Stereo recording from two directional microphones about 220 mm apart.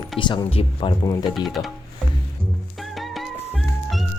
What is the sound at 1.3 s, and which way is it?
Speech, centre (ahead or behind).